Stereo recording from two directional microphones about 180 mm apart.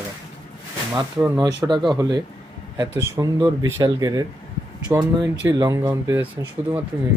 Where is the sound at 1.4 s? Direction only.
25° right (ahead or behind).